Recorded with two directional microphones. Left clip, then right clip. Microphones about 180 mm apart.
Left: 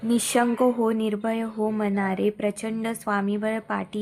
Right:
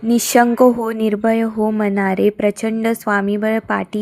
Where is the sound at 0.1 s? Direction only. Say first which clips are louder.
Right 9 dB; 30° right (ahead or behind).